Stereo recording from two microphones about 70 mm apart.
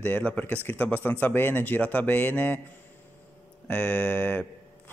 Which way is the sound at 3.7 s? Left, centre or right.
Centre.